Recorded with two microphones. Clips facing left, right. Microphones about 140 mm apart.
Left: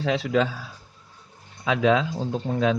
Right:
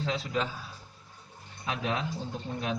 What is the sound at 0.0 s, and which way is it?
Speech, 90° left.